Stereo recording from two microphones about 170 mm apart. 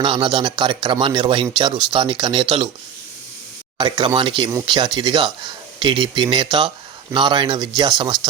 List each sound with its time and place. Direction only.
0.0 s speech: 30° right (ahead or behind)
3.8 s speech: 25° right (ahead or behind)